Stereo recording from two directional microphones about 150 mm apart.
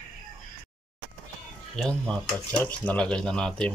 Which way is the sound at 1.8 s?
5° left (ahead or behind).